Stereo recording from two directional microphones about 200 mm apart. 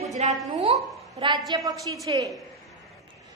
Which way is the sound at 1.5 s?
15° right (ahead or behind).